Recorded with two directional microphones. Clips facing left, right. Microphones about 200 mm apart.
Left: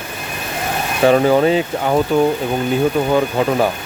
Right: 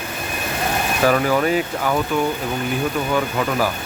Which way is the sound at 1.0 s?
25° left (ahead or behind).